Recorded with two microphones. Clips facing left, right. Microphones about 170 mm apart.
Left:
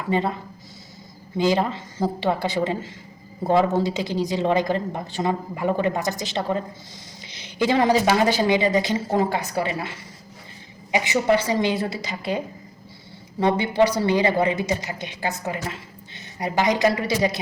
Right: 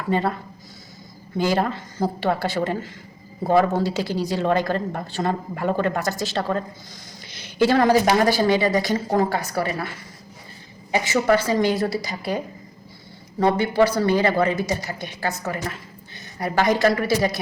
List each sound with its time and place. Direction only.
0.1 s a woman's voice: 20° left (ahead or behind)
1.4 s a woman's voice: 20° left (ahead or behind)
7.3 s a sound: 20° left (ahead or behind)
8.2 s a woman's voice: 20° left (ahead or behind)
10.9 s a woman's voice: 20° left (ahead or behind)
13.4 s a woman's voice: 20° left (ahead or behind)
16.4 s a woman's voice: 20° left (ahead or behind)